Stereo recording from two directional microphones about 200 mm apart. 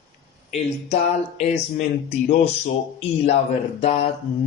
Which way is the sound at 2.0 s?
45° left (ahead or behind).